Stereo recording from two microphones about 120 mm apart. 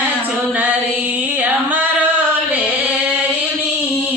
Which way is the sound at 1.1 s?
15° right (ahead or behind).